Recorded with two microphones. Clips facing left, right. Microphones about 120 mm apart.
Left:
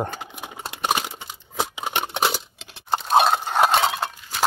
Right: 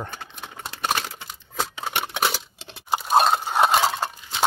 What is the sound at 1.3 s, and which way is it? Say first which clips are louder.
Scissors: left 2 dB; 10° left (ahead or behind).